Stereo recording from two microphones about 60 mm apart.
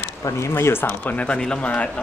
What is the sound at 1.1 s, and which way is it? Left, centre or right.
Speech, centre.